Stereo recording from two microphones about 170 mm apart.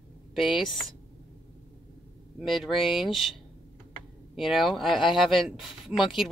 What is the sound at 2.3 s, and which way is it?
Speech, centre (ahead or behind).